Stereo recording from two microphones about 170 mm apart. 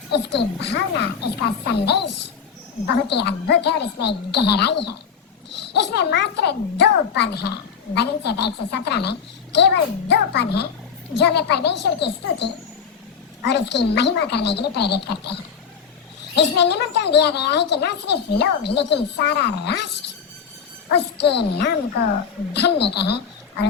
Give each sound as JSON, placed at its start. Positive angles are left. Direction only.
{"t": 0.1, "sound": "a woman's voice", "side_deg": 80}
{"t": 16.4, "sound": "a child's voice", "side_deg": 80}
{"t": 20.9, "sound": "a woman's voice", "side_deg": 80}